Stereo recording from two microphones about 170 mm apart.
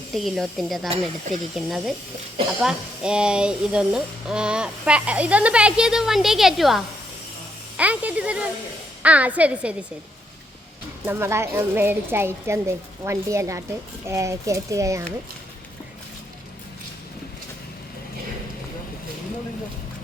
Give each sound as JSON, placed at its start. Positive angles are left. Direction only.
{"t": 0.1, "sound": "a woman's voice", "side_deg": 0}
{"t": 11.0, "sound": "a woman's voice", "side_deg": -15}